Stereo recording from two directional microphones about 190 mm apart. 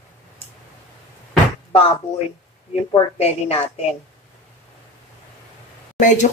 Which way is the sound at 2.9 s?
30° left (ahead or behind).